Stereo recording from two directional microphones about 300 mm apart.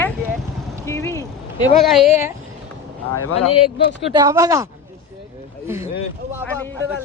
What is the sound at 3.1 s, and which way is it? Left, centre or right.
Speech, left.